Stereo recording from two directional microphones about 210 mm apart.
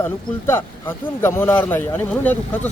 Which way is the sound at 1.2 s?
10° left (ahead or behind).